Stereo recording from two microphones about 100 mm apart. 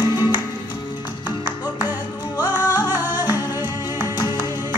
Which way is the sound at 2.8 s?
20° right (ahead or behind).